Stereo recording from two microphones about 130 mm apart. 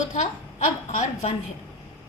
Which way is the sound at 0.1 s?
65° left (ahead or behind).